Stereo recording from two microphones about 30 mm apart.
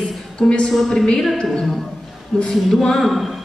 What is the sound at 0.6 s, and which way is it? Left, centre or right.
Speech, centre.